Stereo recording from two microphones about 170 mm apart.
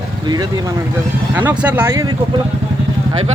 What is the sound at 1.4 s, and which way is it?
Speech, 10° right (ahead or behind).